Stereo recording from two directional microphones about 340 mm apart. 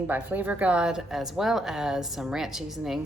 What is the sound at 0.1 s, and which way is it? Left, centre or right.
Speech, centre.